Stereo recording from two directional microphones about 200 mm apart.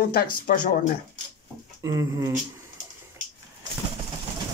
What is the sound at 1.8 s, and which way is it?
Speech, 15° right (ahead or behind).